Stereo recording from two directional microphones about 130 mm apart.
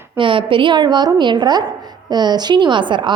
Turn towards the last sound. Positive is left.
turn(degrees=-40)  # may be behind; listen again after turning